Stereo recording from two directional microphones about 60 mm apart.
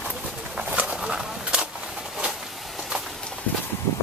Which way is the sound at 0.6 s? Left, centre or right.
Centre.